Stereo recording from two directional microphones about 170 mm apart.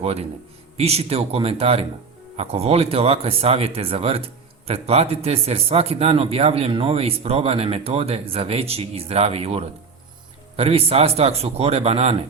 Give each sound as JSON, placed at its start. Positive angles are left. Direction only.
{"t": 0.8, "sound": "speech", "side_deg": -35}